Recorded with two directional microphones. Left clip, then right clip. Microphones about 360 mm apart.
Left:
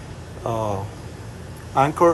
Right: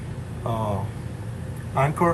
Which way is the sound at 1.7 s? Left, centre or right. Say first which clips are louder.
Left 5 dB; centre.